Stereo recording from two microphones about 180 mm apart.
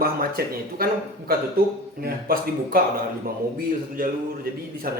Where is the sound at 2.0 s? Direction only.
55° right (ahead or behind).